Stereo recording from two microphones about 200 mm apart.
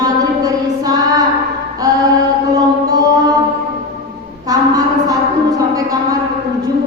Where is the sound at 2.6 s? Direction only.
20° right (ahead or behind).